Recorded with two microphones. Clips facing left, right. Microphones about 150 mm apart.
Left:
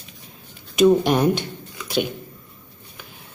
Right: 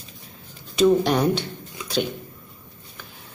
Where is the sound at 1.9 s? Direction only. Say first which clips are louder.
Left 2 dB; 15° left (ahead or behind).